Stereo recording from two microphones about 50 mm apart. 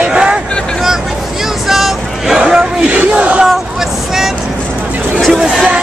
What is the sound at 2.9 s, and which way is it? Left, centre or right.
Crowd, right.